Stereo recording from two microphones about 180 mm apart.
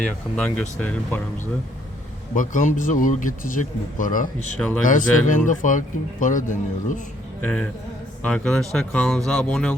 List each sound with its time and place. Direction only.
0.3 s speech: 5° left (ahead or behind)
2.3 s speech: 45° left (ahead or behind)
7.4 s speech: 5° left (ahead or behind)